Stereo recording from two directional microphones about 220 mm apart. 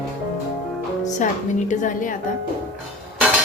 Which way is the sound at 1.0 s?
35° left (ahead or behind).